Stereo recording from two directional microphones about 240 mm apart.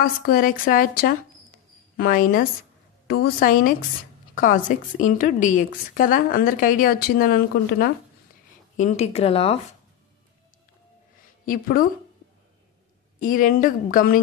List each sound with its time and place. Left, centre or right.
0.0 s a woman's voice: left
11.4 s a woman's voice: left
13.2 s a woman's voice: left